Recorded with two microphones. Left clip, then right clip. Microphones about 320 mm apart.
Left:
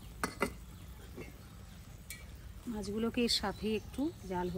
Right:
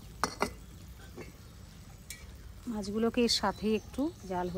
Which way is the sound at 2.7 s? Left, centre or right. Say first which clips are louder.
Right 5 dB; centre.